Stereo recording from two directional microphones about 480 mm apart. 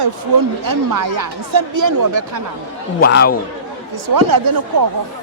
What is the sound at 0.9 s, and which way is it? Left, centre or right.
Speech, right.